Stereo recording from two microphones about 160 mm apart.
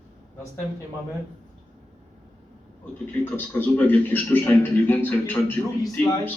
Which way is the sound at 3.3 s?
10° left (ahead or behind).